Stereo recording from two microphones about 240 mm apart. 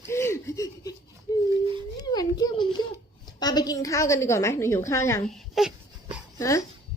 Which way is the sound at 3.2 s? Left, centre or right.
Centre.